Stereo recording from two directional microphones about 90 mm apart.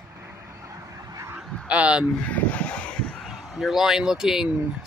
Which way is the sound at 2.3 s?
15° left (ahead or behind).